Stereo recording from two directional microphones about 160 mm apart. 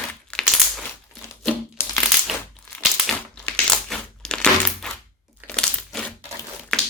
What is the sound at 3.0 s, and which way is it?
Crushing, 5° left (ahead or behind).